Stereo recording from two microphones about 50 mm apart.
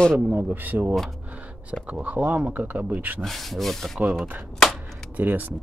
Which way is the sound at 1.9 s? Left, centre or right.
Right.